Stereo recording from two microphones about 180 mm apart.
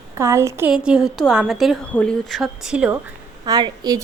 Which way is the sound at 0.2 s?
15° right (ahead or behind).